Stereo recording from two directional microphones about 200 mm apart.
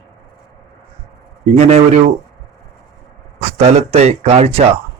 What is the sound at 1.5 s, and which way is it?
Speech, 30° right (ahead or behind).